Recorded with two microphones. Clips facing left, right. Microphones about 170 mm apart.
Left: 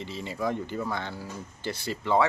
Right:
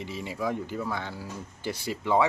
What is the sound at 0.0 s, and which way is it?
Speech, 10° right (ahead or behind).